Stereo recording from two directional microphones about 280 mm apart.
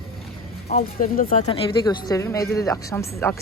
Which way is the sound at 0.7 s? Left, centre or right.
Left.